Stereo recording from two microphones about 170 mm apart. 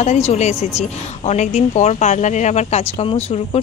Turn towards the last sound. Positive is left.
turn(degrees=40)  # may be behind; listen again after turning